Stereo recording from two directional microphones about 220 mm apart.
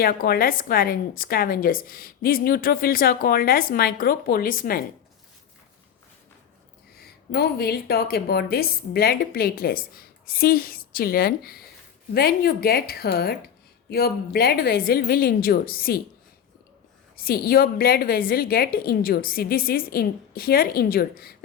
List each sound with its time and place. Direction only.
0.0 s a woman's voice: 40° left (ahead or behind)
6.9 s a woman's voice: 45° left (ahead or behind)
17.2 s a woman's voice: 45° left (ahead or behind)